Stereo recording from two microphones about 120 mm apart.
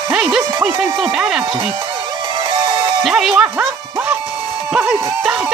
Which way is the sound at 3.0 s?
Centre (ahead or behind).